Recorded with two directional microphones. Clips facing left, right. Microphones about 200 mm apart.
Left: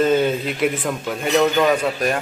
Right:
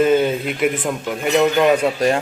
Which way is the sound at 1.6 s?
25° right (ahead or behind).